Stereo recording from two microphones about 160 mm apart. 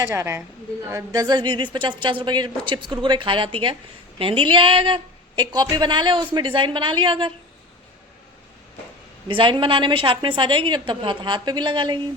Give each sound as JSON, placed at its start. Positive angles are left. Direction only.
{"t": 0.0, "sound": "a woman's voice", "side_deg": -15}
{"t": 9.2, "sound": "a woman's voice", "side_deg": -30}